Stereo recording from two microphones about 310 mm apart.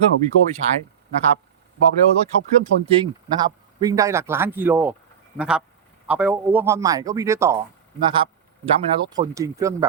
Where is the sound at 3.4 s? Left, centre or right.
Centre.